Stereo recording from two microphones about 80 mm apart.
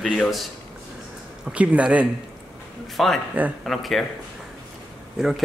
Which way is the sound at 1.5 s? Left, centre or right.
Centre.